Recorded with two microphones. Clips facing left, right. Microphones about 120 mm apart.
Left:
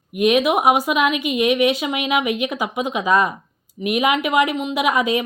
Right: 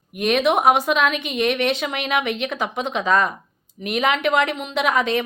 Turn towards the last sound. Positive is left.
turn(degrees=10)  # may be behind; listen again after turning